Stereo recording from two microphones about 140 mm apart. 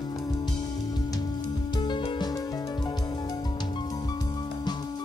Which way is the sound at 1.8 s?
35° left (ahead or behind).